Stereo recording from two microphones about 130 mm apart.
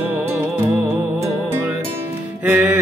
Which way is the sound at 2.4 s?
15° right (ahead or behind).